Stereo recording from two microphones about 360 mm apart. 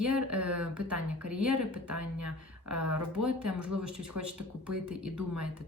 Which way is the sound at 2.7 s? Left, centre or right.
Right.